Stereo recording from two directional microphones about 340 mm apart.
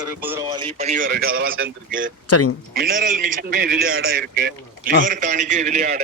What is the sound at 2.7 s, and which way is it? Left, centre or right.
Speech, right.